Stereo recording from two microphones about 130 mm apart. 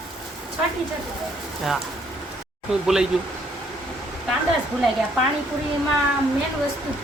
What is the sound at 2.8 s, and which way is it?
Speech, 5° right (ahead or behind).